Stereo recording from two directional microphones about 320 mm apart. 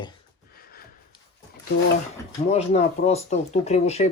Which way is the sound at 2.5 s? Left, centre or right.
Centre.